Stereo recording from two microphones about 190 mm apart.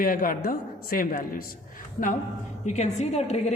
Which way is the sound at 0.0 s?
50° left (ahead or behind).